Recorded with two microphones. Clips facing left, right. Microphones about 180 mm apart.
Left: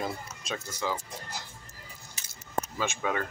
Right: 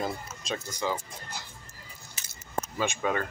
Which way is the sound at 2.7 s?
Centre (ahead or behind).